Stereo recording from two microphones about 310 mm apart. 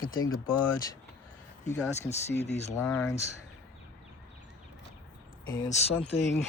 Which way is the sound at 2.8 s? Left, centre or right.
Centre.